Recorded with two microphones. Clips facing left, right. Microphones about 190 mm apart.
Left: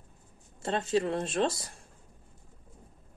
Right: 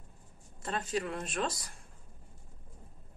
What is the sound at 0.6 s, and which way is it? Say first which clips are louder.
Speech: left 6 dB; 25° left (ahead or behind).